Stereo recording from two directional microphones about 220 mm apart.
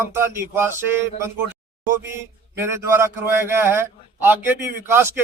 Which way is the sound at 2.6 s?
10° right (ahead or behind).